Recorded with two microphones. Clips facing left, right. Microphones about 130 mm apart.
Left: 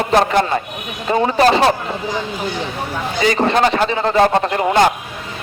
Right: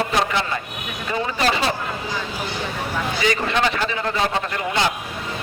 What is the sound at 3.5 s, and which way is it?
Speech, 40° left (ahead or behind).